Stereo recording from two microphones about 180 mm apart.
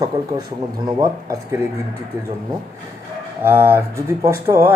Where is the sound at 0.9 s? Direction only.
20° right (ahead or behind).